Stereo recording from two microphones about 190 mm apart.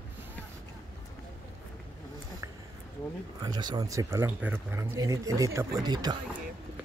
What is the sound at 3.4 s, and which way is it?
Speech, 20° right (ahead or behind).